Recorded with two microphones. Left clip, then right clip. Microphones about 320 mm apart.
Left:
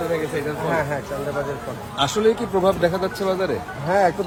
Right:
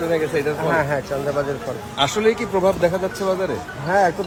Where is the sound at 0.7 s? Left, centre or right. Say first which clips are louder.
Right 2 dB; right.